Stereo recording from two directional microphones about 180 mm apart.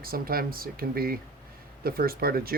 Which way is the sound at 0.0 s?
55° right (ahead or behind).